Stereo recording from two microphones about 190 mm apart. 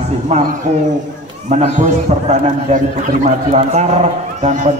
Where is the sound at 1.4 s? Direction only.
40° right (ahead or behind).